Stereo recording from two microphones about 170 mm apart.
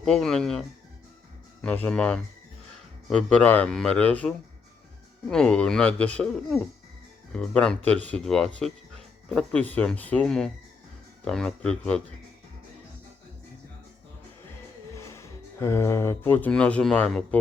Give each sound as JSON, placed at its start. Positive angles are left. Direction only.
{"t": 0.0, "sound": "a man's voice", "side_deg": 5}
{"t": 1.6, "sound": "a man's voice", "side_deg": 10}
{"t": 14.9, "sound": "speech", "side_deg": 15}